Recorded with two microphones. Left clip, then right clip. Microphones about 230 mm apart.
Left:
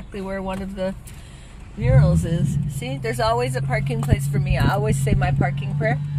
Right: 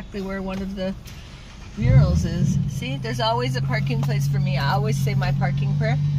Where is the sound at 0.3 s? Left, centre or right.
Left.